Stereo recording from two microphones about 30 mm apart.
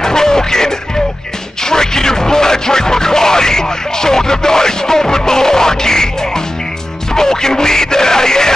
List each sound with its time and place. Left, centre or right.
0.0 s music: centre
1.6 s a sound: centre
7.2 s speech: left